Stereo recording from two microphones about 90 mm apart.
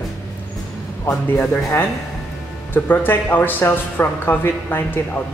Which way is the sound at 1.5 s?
25° left (ahead or behind).